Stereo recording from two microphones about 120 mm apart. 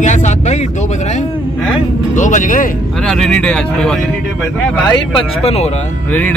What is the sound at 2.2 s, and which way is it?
Speech, 90° left.